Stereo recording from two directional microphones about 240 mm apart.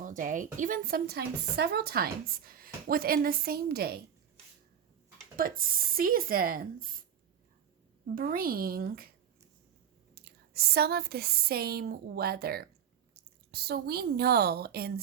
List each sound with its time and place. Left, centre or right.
0.0 s a woman's voice: right
5.4 s a woman's voice: right
8.1 s a woman's voice: right
10.2 s a woman's voice: right